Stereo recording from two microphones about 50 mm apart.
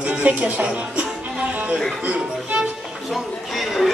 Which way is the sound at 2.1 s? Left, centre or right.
Right.